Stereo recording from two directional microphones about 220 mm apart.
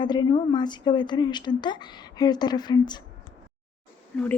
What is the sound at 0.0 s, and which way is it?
Speech, 20° left (ahead or behind).